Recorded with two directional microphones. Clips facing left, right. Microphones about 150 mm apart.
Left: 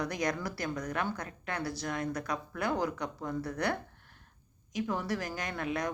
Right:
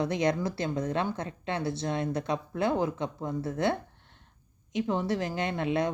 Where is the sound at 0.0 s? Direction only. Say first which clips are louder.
Right 6 dB; 25° right (ahead or behind).